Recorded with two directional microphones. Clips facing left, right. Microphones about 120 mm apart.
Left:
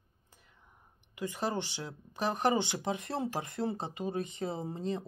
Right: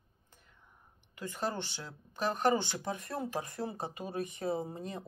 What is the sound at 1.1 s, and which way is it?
Speech, 15° left (ahead or behind).